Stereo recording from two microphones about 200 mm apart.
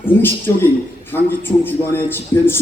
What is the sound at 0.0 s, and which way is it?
A man's voice, 10° left (ahead or behind).